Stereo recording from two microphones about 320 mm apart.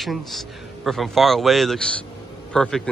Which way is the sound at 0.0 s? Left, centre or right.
Centre.